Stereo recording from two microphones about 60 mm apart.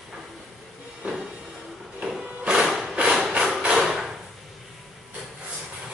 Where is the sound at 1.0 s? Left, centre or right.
Centre.